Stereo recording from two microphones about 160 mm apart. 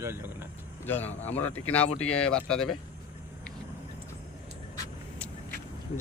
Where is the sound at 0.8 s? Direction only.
15° left (ahead or behind).